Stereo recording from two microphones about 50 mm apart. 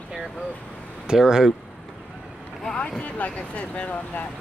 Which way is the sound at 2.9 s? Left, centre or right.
Left.